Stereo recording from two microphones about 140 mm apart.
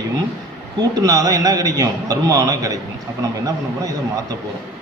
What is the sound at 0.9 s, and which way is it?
A man's voice, 25° right (ahead or behind).